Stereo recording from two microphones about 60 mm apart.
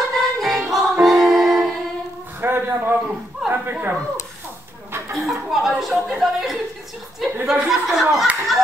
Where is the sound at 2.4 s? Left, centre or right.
Right.